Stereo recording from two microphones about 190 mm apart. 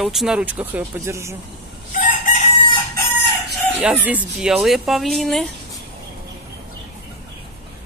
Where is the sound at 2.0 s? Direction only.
40° left (ahead or behind).